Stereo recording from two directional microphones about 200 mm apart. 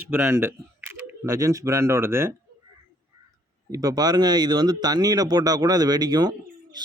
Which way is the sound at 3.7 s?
20° right (ahead or behind).